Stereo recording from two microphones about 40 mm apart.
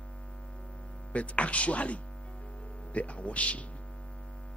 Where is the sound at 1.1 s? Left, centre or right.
Left.